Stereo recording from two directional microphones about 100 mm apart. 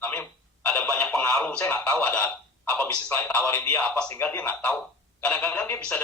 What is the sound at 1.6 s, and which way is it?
A man's voice, 20° left (ahead or behind).